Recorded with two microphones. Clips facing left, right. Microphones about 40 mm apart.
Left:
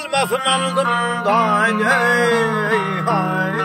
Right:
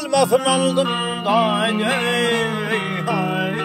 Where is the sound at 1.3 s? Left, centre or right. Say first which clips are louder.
Left 1 dB; left.